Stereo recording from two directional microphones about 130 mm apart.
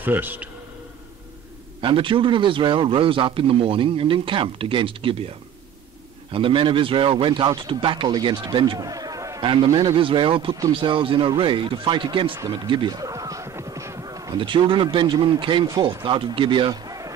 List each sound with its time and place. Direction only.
0.0 s a man's voice: 15° right (ahead or behind)
1.8 s a man's voice: 40° right (ahead or behind)
6.3 s a man's voice: 40° right (ahead or behind); by 9.4 s 25° right (ahead or behind)
9.4 s a man's voice: 40° right (ahead or behind)
12.6 s a sound: 35° right (ahead or behind)
14.4 s a man's voice: 40° right (ahead or behind)